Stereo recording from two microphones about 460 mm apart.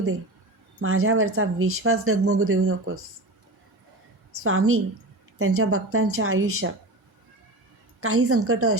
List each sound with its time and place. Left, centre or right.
0.8 s speech: right
4.4 s speech: right
8.0 s speech: right